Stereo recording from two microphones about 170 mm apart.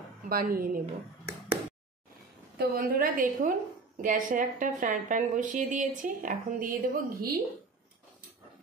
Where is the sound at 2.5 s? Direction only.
60° right (ahead or behind).